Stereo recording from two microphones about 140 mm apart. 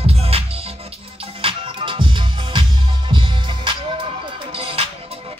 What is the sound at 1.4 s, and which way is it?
Music, 40° right (ahead or behind).